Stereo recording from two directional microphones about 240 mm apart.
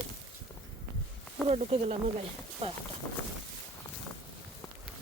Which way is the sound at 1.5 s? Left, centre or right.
Right.